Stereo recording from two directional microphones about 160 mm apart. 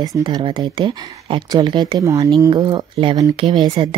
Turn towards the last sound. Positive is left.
turn(degrees=-30)  # may be behind; listen again after turning